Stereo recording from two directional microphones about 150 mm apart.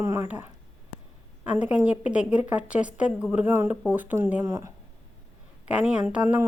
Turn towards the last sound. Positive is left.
turn(degrees=-10)  # may be behind; listen again after turning